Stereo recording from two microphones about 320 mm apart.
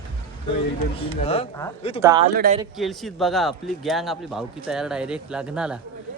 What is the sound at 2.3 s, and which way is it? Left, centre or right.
Speech, right.